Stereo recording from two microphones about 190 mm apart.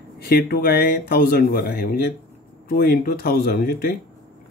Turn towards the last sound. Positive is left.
turn(degrees=55)  # may be behind; listen again after turning